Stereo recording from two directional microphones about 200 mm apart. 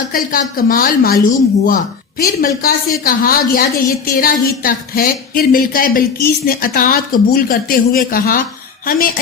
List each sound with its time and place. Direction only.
0.1 s a woman's voice: 45° left (ahead or behind)